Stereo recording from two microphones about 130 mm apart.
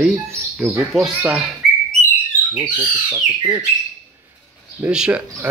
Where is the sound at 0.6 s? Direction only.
Centre (ahead or behind).